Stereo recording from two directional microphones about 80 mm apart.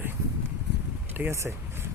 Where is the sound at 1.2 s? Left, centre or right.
Right.